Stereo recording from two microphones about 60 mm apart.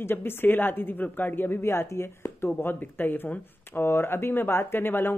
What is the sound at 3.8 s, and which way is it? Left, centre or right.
A woman's voice, left.